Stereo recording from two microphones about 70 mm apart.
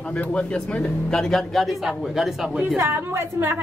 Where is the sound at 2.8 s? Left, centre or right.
Right.